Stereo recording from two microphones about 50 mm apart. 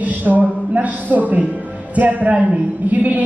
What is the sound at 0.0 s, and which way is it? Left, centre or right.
A woman's voice, right.